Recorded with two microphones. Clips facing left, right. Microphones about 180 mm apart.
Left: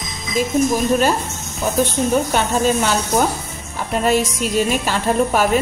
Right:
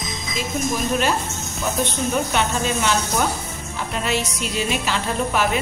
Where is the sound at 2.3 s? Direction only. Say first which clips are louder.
Left 5 dB; 40° left (ahead or behind).